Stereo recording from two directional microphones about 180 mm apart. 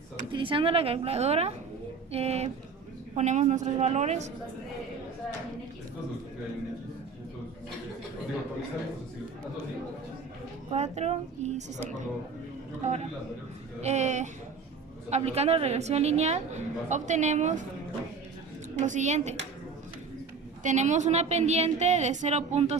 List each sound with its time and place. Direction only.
0.3 s a woman's voice: 30° right (ahead or behind)
10.7 s a woman's voice: 40° right (ahead or behind)
18.8 s a woman's voice: 40° right (ahead or behind)
20.7 s a woman's voice: 40° right (ahead or behind)